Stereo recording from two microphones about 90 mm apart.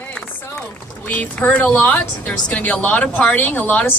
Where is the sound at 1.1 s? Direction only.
20° left (ahead or behind).